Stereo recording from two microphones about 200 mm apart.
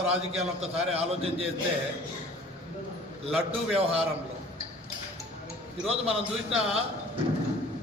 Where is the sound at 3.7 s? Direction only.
30° right (ahead or behind).